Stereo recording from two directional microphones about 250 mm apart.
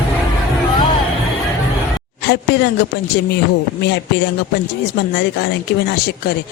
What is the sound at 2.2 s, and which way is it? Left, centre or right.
A woman's voice, left.